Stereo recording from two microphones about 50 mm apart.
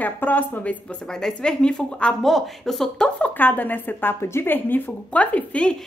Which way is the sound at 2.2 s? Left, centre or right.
Centre.